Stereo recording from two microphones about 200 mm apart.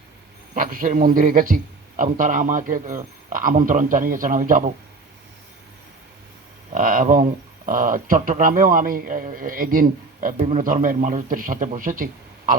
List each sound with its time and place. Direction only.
0.5 s a man's voice: 45° right (ahead or behind)
6.7 s speech: 40° right (ahead or behind)